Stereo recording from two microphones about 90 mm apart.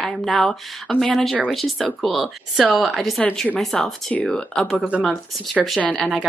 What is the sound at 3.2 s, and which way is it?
Speech, 10° left (ahead or behind).